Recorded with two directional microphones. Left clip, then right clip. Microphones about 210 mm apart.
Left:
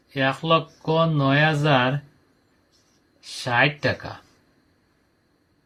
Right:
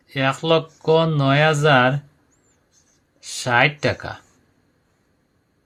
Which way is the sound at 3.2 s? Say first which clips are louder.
Right 3 dB; 50° right (ahead or behind).